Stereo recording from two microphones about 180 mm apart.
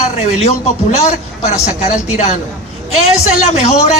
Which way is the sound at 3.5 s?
40° left (ahead or behind).